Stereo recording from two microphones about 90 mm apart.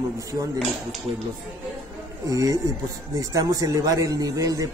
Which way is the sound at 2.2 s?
40° right (ahead or behind).